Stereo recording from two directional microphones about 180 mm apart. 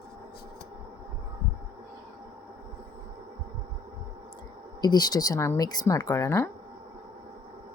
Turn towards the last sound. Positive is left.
turn(degrees=15)  # may be behind; listen again after turning